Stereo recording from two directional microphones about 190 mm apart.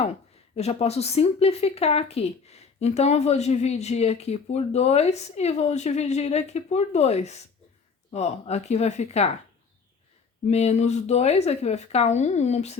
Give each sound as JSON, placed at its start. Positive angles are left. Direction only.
{"t": 0.5, "sound": "speech", "side_deg": 30}
{"t": 10.5, "sound": "speech", "side_deg": 35}